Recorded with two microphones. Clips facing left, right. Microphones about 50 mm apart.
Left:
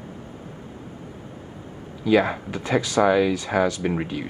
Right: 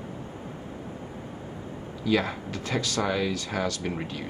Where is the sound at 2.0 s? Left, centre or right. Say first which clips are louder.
Left 6 dB; centre.